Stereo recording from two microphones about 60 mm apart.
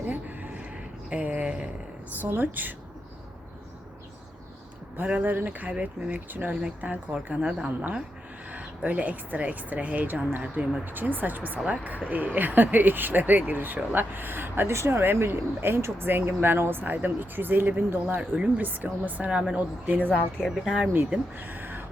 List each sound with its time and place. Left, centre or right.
0.1 s a sound: right
1.1 s speech: right
2.2 s speech: right
4.9 s speech: right
6.5 s speech: centre; by 14.7 s right
14.7 s speech: right
18.2 s speech: centre
18.6 s speech: right
20.4 s speech: centre
21.3 s a sound: right